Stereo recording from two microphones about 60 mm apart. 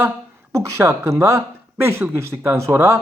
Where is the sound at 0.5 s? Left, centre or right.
Right.